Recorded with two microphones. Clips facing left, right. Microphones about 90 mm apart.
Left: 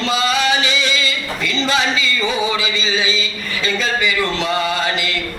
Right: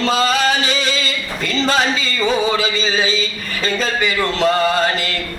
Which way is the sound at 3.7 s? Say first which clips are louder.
Even; 40° right (ahead or behind).